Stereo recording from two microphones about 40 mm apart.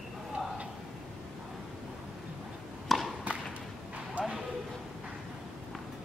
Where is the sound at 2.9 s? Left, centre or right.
Centre.